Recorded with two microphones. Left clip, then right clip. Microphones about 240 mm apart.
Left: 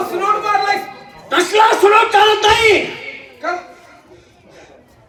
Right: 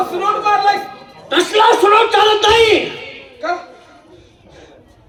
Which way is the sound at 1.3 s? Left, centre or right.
Right.